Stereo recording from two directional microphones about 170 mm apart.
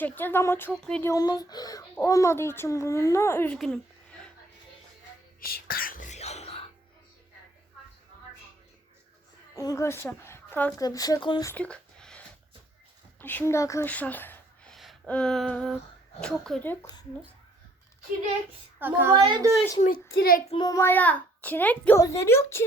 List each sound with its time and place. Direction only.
0.0 s a child's voice: 10° left (ahead or behind)
1.0 s a child's voice: 20° left (ahead or behind); by 4.3 s 5° left (ahead or behind)
5.4 s whispering: 60° left (ahead or behind); by 6.7 s 35° left (ahead or behind)
9.6 s a woman's voice: 20° left (ahead or behind)
10.8 s speech: 20° left (ahead or behind)
11.4 s a sound: 10° left (ahead or behind)
13.1 s speech: 10° left (ahead or behind)
18.8 s a woman's voice: 10° right (ahead or behind)
19.1 s a woman's voice: 30° right (ahead or behind)
19.8 s a child's voice: 60° left (ahead or behind)
20.5 s a child's voice: 25° left (ahead or behind)